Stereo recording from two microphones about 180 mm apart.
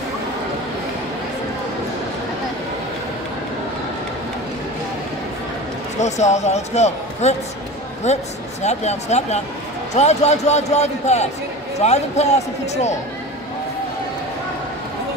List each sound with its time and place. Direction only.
5.9 s speech: 40° left (ahead or behind)